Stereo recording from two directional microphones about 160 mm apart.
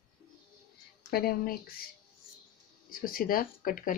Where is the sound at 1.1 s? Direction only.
70° left (ahead or behind).